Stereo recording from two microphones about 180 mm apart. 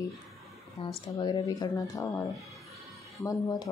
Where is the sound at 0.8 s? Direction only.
30° left (ahead or behind).